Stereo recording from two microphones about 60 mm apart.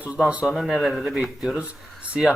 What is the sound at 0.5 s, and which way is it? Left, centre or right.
Speech, centre.